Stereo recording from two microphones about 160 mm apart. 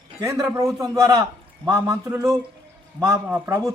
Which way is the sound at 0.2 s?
20° right (ahead or behind).